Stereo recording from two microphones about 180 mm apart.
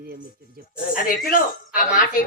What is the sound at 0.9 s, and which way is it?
A man's voice, 50° left (ahead or behind).